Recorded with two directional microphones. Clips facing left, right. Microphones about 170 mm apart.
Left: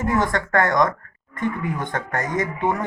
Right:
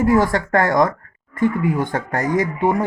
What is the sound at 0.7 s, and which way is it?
Speech, 35° right (ahead or behind).